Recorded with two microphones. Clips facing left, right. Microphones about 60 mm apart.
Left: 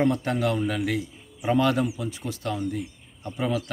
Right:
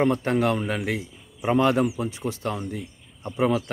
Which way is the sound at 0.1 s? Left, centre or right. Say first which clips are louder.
Right 3 dB; right.